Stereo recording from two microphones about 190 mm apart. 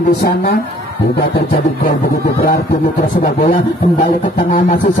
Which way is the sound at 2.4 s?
50° left (ahead or behind).